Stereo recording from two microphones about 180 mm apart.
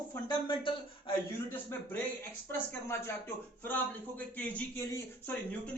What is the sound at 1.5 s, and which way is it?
Speech, 10° left (ahead or behind).